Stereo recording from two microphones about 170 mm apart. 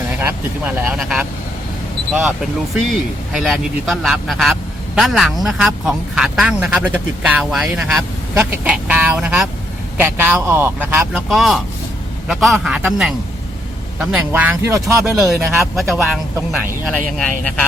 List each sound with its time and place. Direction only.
0.2 s a man's voice: 10° right (ahead or behind)
2.7 s a man's voice: centre (ahead or behind)
15.2 s speech: centre (ahead or behind)